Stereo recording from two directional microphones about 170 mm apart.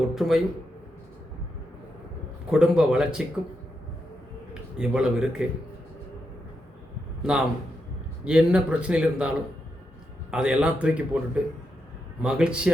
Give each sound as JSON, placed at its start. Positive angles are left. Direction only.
{"t": 0.1, "sound": "a man's voice", "side_deg": 0}
{"t": 2.5, "sound": "a man's voice", "side_deg": -5}
{"t": 4.8, "sound": "a man's voice", "side_deg": -5}
{"t": 7.2, "sound": "a man's voice", "side_deg": -5}
{"t": 10.3, "sound": "a man's voice", "side_deg": -5}
{"t": 12.2, "sound": "a man's voice", "side_deg": -5}